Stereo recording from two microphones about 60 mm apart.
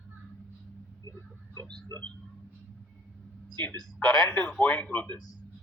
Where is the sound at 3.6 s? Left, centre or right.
Left.